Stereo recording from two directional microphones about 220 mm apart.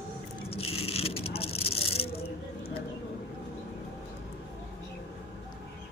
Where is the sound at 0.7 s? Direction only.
25° left (ahead or behind).